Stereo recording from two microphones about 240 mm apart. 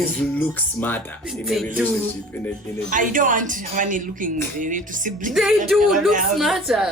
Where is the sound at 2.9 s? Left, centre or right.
Right.